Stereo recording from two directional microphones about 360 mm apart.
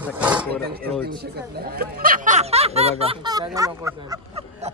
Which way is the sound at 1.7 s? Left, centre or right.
Right.